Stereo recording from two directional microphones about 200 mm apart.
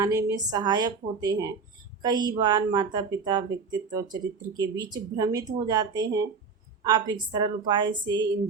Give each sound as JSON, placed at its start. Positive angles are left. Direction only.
{"t": 0.0, "sound": "speech", "side_deg": -15}